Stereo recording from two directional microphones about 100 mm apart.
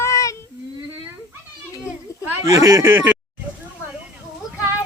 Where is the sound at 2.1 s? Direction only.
35° left (ahead or behind).